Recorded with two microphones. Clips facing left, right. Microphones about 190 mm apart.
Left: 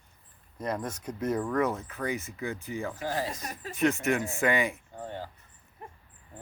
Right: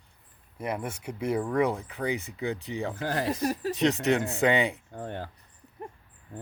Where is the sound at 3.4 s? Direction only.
40° right (ahead or behind).